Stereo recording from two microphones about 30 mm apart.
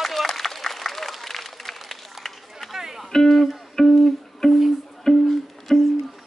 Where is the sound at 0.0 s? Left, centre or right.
Centre.